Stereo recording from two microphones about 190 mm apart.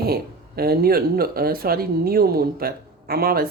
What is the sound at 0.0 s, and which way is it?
Speech, 55° right (ahead or behind).